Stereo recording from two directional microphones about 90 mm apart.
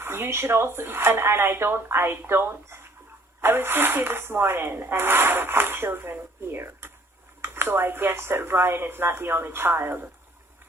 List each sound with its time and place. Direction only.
0.0 s speech: 25° right (ahead or behind)